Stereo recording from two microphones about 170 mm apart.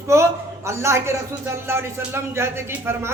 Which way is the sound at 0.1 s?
15° right (ahead or behind).